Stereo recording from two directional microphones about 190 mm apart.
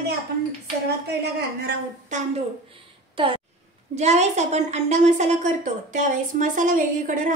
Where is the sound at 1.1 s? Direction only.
60° right (ahead or behind).